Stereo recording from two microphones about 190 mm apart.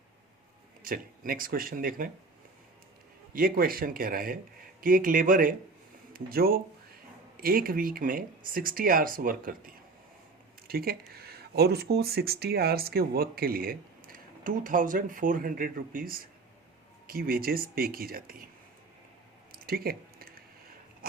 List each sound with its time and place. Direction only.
0.9 s speech: 50° right (ahead or behind)
3.3 s speech: 50° right (ahead or behind)
19.5 s a sound: 50° right (ahead or behind)